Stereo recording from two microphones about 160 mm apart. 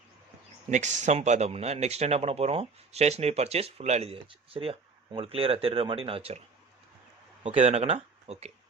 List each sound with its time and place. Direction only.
0.7 s speech: 50° right (ahead or behind)
7.4 s speech: 40° right (ahead or behind)